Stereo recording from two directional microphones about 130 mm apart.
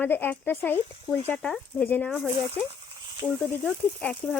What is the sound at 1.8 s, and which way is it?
Speech, 15° left (ahead or behind).